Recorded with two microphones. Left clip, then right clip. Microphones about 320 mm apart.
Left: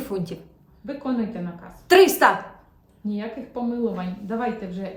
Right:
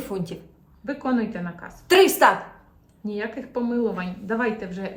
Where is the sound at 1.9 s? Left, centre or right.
Centre.